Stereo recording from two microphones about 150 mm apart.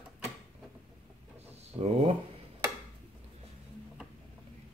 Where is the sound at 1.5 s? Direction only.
45° right (ahead or behind).